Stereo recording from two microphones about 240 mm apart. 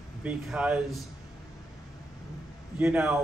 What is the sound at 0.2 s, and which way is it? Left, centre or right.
Speech, centre.